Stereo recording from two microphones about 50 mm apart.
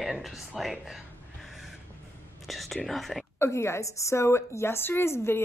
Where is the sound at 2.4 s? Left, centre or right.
Centre.